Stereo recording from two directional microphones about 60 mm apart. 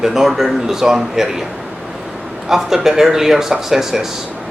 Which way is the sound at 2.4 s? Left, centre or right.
Centre.